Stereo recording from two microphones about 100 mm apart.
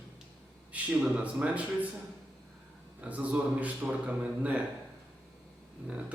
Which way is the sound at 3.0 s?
15° right (ahead or behind).